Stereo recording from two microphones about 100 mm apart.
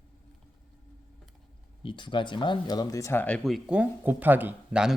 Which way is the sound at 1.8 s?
55° left (ahead or behind).